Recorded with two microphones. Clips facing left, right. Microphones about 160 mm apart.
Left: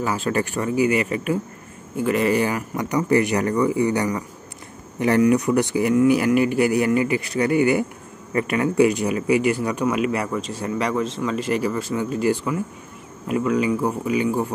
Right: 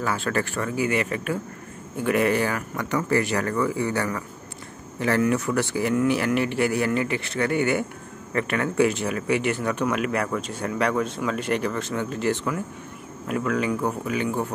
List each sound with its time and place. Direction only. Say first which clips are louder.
0.3 s a man's voice: left 3 dB; 15° left (ahead or behind)
2.0 s speech: left 1 dB; centre (ahead or behind)
2.3 s a man's voice: left 3 dB; 15° left (ahead or behind)